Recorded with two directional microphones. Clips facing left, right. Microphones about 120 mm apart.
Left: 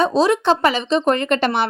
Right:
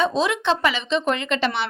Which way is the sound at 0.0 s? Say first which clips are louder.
Left 5 dB; 35° left (ahead or behind).